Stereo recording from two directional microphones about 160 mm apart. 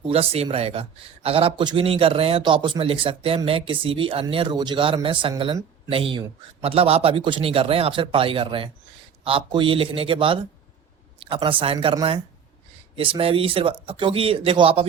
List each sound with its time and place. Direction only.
0.1 s a man's voice: 40° right (ahead or behind)
13.0 s a man's voice: 35° right (ahead or behind)